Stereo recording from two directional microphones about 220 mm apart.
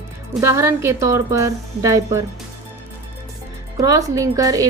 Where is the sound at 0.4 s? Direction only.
15° right (ahead or behind).